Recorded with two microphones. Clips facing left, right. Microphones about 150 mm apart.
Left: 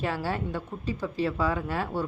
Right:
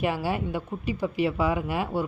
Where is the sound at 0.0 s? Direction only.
15° right (ahead or behind).